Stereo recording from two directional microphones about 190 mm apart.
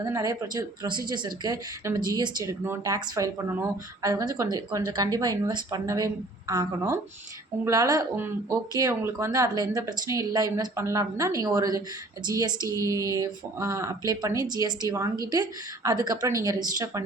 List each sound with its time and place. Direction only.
0.0 s speech: 20° right (ahead or behind)